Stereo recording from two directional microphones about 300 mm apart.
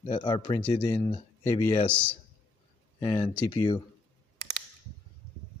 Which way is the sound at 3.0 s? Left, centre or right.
Centre.